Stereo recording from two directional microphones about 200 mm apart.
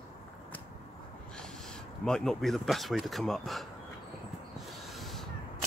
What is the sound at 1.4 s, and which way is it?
Speech, 5° left (ahead or behind).